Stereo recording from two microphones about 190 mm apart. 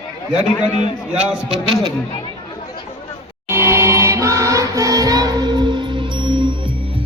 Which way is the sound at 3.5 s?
15° right (ahead or behind).